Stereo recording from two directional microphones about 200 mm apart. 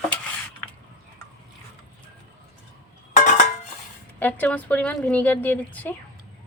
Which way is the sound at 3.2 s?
40° left (ahead or behind).